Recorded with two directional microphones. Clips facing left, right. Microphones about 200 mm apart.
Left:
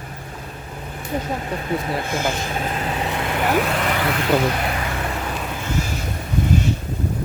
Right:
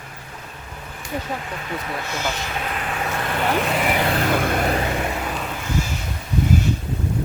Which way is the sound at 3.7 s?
5° right (ahead or behind).